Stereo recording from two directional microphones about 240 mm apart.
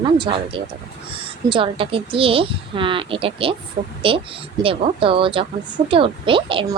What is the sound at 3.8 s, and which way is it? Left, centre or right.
Speech, right.